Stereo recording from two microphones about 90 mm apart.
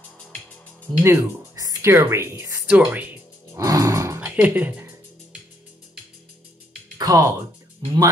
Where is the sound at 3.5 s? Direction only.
40° right (ahead or behind).